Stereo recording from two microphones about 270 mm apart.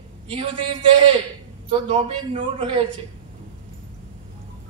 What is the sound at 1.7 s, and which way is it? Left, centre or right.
A man's voice, right.